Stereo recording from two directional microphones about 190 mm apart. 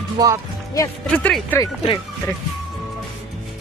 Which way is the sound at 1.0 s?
5° left (ahead or behind).